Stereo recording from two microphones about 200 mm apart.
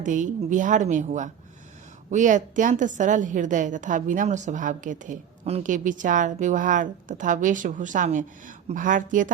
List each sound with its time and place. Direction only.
0.0 s a woman's voice: 40° right (ahead or behind)